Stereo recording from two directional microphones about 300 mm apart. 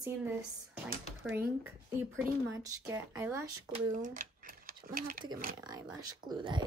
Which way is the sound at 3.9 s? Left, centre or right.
Right.